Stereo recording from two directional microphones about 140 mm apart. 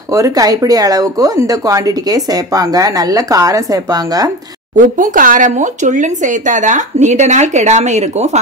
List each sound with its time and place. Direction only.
0.1 s speech: 25° right (ahead or behind)
4.7 s speech: 65° right (ahead or behind)